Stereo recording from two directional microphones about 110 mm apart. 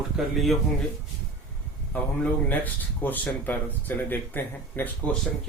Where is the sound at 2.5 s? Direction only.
15° left (ahead or behind).